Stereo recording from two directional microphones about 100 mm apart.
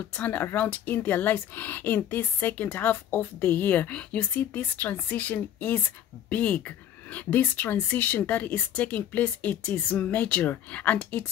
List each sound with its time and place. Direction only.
0.1 s speech: 15° left (ahead or behind)